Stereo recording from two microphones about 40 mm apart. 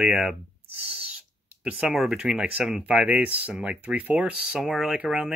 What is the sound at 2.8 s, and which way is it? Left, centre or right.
Speech, right.